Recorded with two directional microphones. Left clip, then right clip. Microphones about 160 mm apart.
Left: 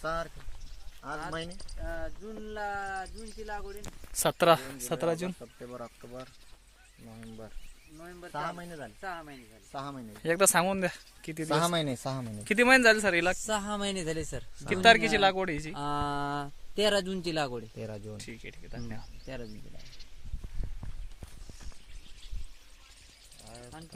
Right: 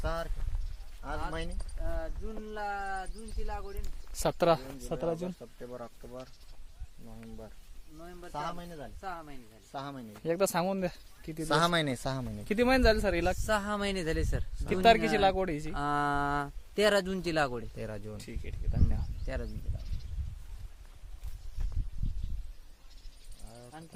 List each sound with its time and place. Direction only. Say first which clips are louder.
0.0 s a sound: left 2 dB; 45° left (ahead or behind)
1.0 s speech: left 1 dB; 45° left (ahead or behind)
4.1 s speech: left 3 dB; centre (ahead or behind)
5.4 s speech: left 1 dB; 40° left (ahead or behind)
8.0 s speech: left 2 dB; 40° left (ahead or behind)
10.2 s speech: left 4 dB; centre (ahead or behind)
11.5 s speech: right 1 dB; 10° right (ahead or behind)
12.1 s speech: left 4 dB; centre (ahead or behind)
13.7 s speech: right 1 dB; 25° right (ahead or behind)
14.7 s speech: left 2 dB; 5° right (ahead or behind)
17.7 s speech: even; 35° left (ahead or behind)
18.2 s speech: left 2 dB; 5° right (ahead or behind)